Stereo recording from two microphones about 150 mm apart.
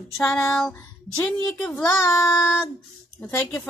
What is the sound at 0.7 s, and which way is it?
Speech, 10° left (ahead or behind).